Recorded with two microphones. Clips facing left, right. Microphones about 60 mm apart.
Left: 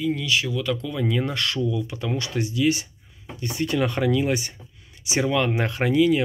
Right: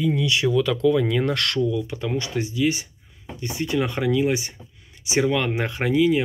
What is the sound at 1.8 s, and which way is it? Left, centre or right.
Speech, right.